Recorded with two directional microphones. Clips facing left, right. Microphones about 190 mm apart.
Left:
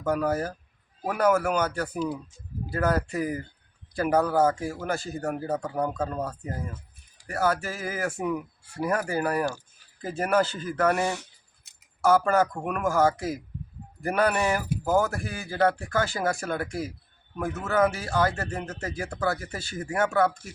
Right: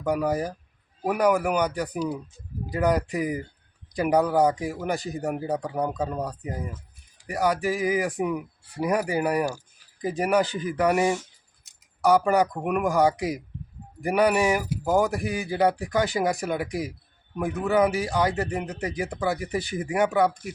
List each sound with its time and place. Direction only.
0.0 s speech: 15° right (ahead or behind)